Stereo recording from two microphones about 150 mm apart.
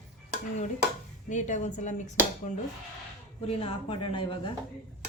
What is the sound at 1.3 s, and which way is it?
A woman's voice, 55° left (ahead or behind).